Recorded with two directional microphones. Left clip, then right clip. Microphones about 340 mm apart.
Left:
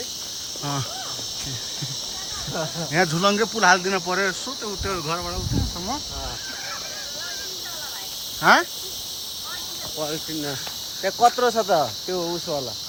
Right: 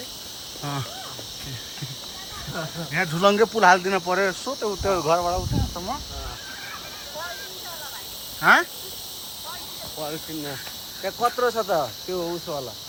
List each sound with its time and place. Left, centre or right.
2.6 s speech: centre
8.4 s speech: centre
11.0 s speech: left